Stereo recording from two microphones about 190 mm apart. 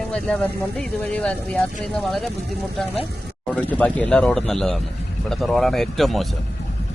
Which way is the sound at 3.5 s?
10° left (ahead or behind).